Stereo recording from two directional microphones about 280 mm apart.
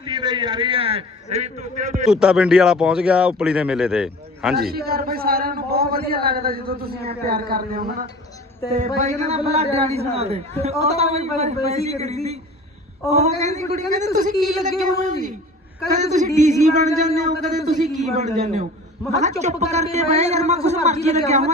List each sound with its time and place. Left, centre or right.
0.0 s a man's voice: centre
2.0 s speech: centre
4.5 s a man's voice: right